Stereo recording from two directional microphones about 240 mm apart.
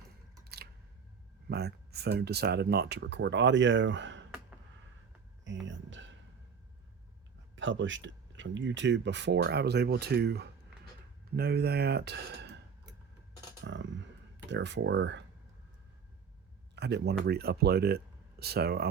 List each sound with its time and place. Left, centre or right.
0.4 s a sound: right
1.5 s speech: right
5.5 s speech: right
7.5 s speech: right
13.7 s a sound: right
14.5 s speech: right
16.7 s speech: right